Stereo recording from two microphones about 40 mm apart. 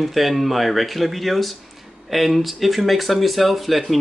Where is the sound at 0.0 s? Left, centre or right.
Centre.